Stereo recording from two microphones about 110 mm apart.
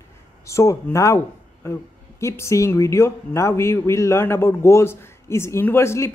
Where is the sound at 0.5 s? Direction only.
25° left (ahead or behind).